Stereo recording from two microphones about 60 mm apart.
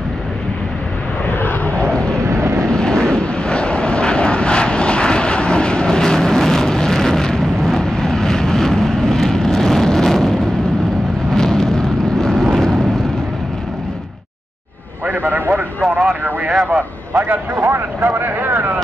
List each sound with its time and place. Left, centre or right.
1.4 s vehicle: left
2.1 s vehicle: right
2.6 s vehicle: centre
11.3 s vehicle: centre
15.2 s a sound: right
17.1 s a sound: right
17.6 s vehicle: right